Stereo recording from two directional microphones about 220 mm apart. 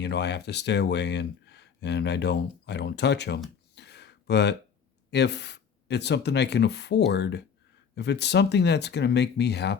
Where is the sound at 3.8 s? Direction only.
50° left (ahead or behind).